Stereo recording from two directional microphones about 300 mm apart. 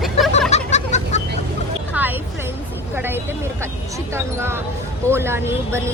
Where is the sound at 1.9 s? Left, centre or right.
Centre.